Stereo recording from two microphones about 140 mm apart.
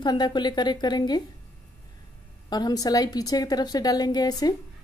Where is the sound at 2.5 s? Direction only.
30° left (ahead or behind).